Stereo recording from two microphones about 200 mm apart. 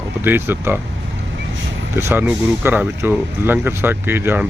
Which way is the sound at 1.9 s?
10° right (ahead or behind).